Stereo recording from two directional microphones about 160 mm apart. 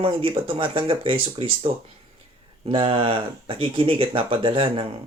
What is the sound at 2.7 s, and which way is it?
Speech, 35° right (ahead or behind).